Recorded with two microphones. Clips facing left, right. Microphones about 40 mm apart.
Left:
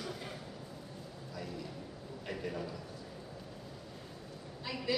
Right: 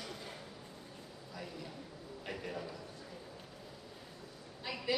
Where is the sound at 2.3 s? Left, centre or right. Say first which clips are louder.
Left 3 dB; centre.